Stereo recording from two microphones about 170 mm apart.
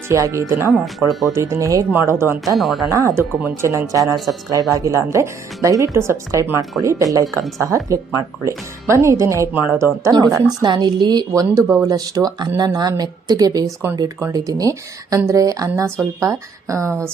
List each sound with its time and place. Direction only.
0.1 s speech: 15° right (ahead or behind)
2.6 s speech: centre (ahead or behind)
2.9 s a woman's voice: 15° right (ahead or behind)